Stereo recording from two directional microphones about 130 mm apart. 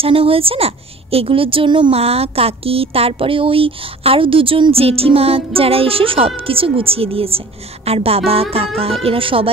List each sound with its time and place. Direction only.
0.0 s a woman's voice: 45° right (ahead or behind)